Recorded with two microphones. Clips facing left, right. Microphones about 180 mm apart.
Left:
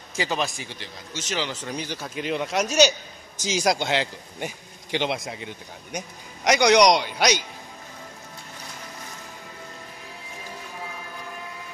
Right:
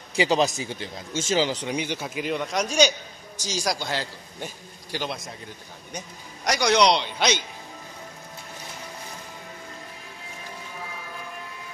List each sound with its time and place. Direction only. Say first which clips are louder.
0.1 s speech: right 5 dB; 15° right (ahead or behind)
1.3 s speech: right 6 dB; 30° right (ahead or behind)
1.6 s speech: right 3 dB; 15° right (ahead or behind); by 2.9 s 5° left (ahead or behind)
3.3 s a man's voice: left 5 dB; 20° left (ahead or behind)